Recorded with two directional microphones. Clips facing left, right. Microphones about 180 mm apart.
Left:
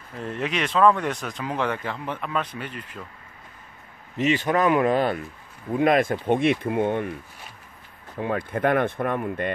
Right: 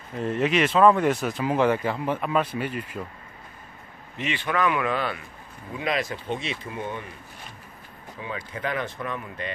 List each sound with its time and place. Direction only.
0.2 s speech: centre (ahead or behind)
4.2 s speech: 40° left (ahead or behind); by 7.1 s 60° left (ahead or behind)
8.2 s speech: 55° left (ahead or behind)